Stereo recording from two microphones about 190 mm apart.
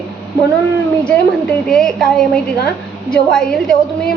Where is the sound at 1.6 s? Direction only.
Centre (ahead or behind).